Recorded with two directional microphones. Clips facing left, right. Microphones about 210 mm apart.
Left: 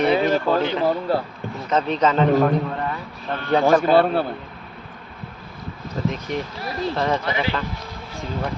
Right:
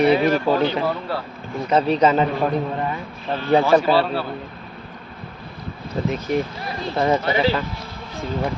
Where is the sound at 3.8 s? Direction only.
50° left (ahead or behind).